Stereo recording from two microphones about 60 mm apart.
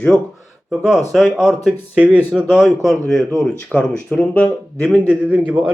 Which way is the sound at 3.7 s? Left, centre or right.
Left.